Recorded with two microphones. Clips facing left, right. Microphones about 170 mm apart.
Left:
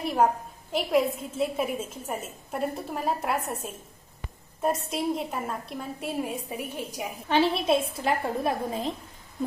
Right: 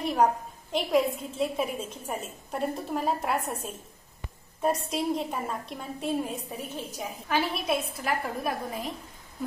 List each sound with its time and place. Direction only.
0.0 s a woman's voice: 5° left (ahead or behind)
7.2 s a woman's voice: 25° left (ahead or behind)